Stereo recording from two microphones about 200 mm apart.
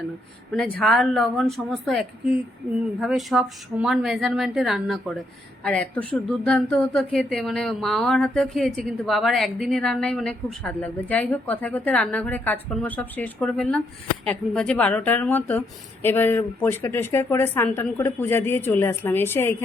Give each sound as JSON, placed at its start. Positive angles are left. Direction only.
{"t": 0.8, "sound": "speech", "side_deg": 0}